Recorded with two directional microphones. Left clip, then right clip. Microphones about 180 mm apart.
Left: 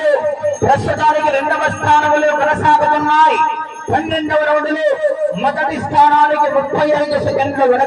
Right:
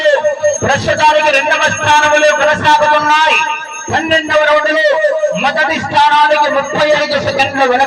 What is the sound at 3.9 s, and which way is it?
A man's voice, 40° left (ahead or behind).